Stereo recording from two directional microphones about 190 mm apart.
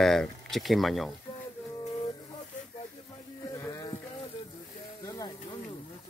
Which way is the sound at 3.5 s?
15° left (ahead or behind).